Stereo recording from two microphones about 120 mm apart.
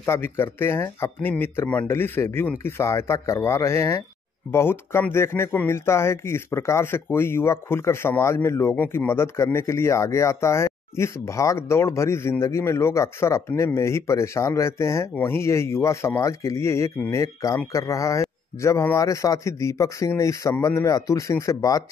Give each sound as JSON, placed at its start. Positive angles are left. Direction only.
{"t": 0.0, "sound": "a man's voice", "side_deg": 20}